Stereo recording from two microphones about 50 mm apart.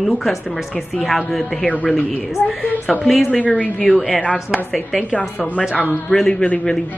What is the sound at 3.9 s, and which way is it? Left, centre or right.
Speech, centre.